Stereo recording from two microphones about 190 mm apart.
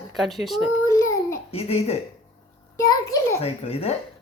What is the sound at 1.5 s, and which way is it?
Speech, 35° left (ahead or behind).